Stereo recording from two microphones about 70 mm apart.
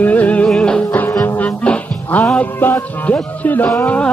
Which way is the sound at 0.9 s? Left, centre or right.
Left.